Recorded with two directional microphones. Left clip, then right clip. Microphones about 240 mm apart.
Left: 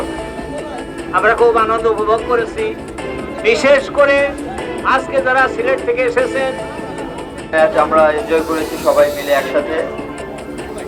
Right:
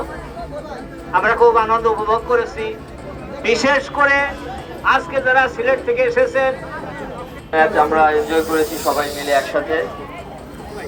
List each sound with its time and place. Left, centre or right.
1.1 s speech: centre
3.4 s speech: centre
7.5 s speech: centre